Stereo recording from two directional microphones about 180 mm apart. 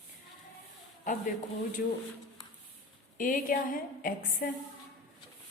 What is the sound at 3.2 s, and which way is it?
A woman's voice, 50° left (ahead or behind).